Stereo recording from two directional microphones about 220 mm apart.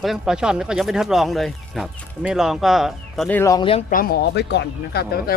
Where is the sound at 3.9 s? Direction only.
45° left (ahead or behind).